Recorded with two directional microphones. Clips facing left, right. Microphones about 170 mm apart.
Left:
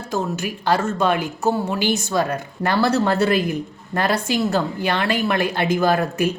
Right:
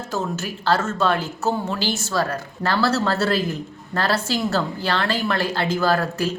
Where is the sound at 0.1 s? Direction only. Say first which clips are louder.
Left 3 dB; 15° left (ahead or behind).